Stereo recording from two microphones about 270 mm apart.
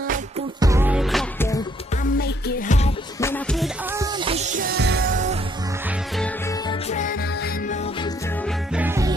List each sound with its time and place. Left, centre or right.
0.6 s music: centre
2.1 s music: left
3.2 s music: centre
4.0 s music: centre
6.7 s music: left
8.7 s music: centre